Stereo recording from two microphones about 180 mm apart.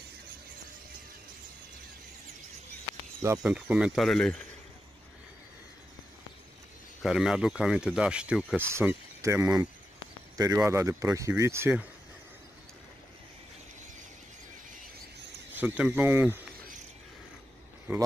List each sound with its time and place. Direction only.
3.2 s speech: 15° right (ahead or behind)
3.5 s speech: 5° right (ahead or behind)
7.0 s speech: 5° right (ahead or behind)
8.7 s speech: 15° right (ahead or behind)
15.5 s speech: 10° right (ahead or behind)